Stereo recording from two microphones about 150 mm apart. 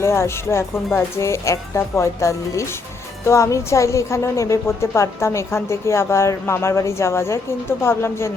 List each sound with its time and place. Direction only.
0.0 s a woman's voice: 15° left (ahead or behind)